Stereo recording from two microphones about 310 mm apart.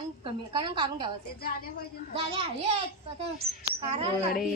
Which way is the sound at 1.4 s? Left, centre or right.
Left.